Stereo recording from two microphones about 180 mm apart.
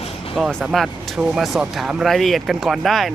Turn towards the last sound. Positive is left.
turn(degrees=0)  # may be behind; listen again after turning